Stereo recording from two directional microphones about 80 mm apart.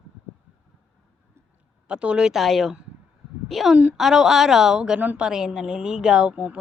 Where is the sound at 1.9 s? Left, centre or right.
Centre.